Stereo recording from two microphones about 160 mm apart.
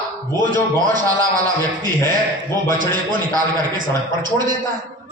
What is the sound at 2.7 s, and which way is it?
Speech, 60° right (ahead or behind).